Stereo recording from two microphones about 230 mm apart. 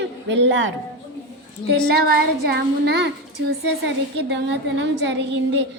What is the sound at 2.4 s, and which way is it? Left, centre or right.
A woman's voice, right.